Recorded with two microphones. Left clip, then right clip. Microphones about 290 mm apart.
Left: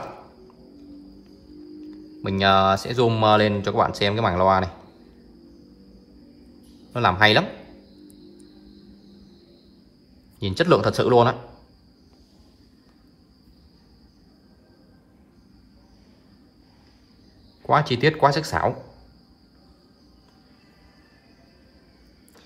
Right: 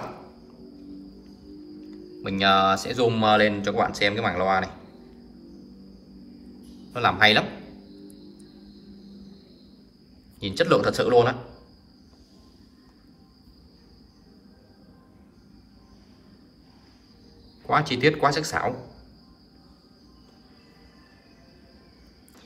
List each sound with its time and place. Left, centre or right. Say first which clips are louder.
1.8 s speech: left 3 dB; centre
6.9 s speech: left 1 dB; centre
10.4 s speech: left 2 dB; centre
17.6 s speech: left 2 dB; centre